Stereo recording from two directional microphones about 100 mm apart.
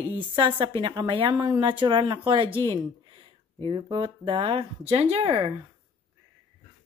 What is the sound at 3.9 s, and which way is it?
A woman's voice, 55° right (ahead or behind).